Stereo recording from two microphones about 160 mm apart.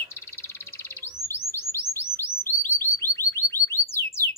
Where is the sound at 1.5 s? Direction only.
15° left (ahead or behind).